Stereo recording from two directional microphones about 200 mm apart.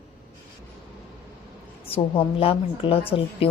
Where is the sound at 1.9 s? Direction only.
30° left (ahead or behind).